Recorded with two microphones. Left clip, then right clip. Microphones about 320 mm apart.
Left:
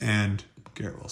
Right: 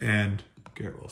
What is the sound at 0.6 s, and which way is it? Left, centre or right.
Computer keyboard, centre.